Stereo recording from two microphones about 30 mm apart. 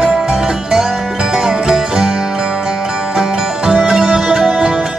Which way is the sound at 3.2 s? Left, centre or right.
Centre.